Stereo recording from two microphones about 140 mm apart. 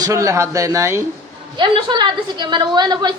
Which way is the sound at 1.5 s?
35° right (ahead or behind).